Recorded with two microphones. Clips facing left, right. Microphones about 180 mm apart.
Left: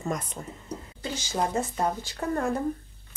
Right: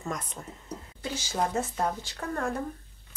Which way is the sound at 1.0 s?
5° right (ahead or behind).